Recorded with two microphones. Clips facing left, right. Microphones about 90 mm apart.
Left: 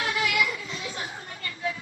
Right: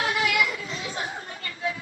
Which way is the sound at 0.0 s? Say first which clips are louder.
Right 2 dB; 35° right (ahead or behind).